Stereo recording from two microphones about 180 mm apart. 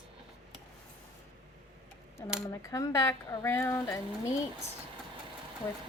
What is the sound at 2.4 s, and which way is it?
Speech, 15° left (ahead or behind).